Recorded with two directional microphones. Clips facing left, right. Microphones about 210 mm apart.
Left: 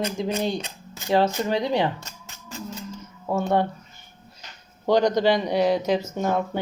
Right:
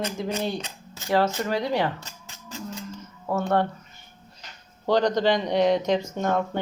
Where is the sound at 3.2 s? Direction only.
10° left (ahead or behind).